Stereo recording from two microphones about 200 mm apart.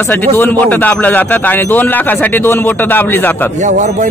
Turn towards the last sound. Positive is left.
turn(degrees=-35)  # may be behind; listen again after turning